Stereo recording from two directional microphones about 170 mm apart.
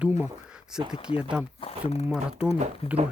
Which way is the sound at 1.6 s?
30° left (ahead or behind).